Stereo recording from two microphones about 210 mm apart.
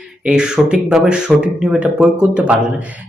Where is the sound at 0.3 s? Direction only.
5° right (ahead or behind).